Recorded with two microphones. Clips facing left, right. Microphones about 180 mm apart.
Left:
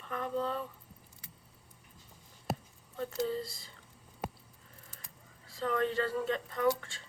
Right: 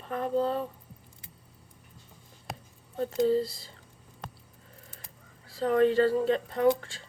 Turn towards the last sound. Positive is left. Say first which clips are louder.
# right 6 dB
turn(degrees=-35)  # may be behind; listen again after turning